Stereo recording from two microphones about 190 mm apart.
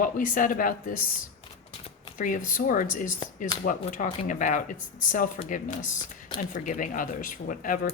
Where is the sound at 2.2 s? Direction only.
45° left (ahead or behind).